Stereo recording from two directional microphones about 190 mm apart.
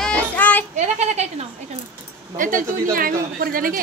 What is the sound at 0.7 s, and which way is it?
A man's voice, 35° right (ahead or behind).